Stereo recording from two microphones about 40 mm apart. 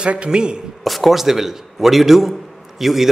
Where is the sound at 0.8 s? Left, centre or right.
Centre.